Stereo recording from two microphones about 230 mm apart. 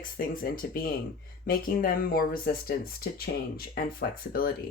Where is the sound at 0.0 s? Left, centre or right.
Left.